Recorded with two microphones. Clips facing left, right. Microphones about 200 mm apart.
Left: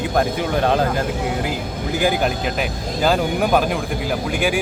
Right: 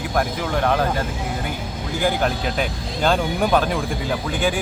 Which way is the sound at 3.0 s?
5° left (ahead or behind).